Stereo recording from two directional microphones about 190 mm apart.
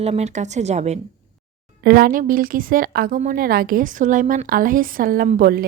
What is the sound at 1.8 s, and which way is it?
Speech, 55° right (ahead or behind).